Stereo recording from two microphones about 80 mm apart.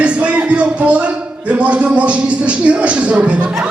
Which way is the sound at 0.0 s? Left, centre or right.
Centre.